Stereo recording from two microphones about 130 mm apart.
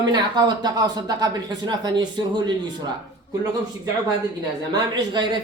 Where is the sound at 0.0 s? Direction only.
35° right (ahead or behind).